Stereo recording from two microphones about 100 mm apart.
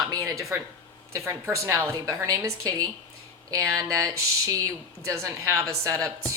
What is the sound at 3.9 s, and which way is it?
Speech, 30° right (ahead or behind).